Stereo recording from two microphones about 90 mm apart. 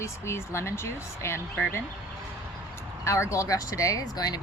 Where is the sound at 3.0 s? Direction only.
30° left (ahead or behind).